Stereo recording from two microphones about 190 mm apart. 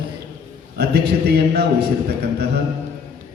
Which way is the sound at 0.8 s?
60° right (ahead or behind).